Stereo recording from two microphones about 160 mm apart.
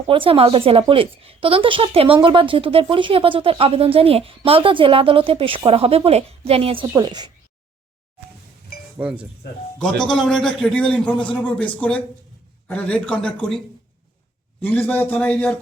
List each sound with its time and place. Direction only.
0.1 s speech: 35° right (ahead or behind)
6.9 s a woman's voice: 25° right (ahead or behind)
8.7 s a sound: 75° left (ahead or behind)
10.0 s a man's voice: 5° left (ahead or behind)
14.6 s a man's voice: 10° left (ahead or behind)